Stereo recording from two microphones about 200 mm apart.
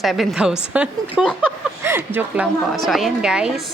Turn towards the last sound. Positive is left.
turn(degrees=-5)  # may be behind; listen again after turning